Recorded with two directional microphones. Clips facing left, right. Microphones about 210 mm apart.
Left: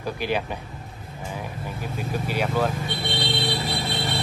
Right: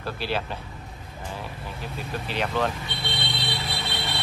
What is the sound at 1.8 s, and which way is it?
Speech, 10° left (ahead or behind).